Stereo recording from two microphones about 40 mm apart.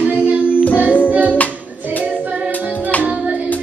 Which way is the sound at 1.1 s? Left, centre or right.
Right.